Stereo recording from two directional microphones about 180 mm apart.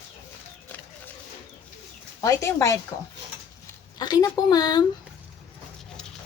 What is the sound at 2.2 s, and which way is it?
Speech, 20° left (ahead or behind).